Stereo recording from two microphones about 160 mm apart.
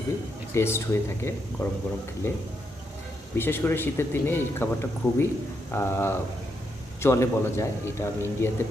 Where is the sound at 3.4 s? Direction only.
15° left (ahead or behind).